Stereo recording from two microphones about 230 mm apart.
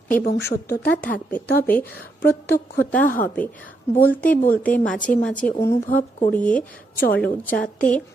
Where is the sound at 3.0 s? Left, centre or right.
Left.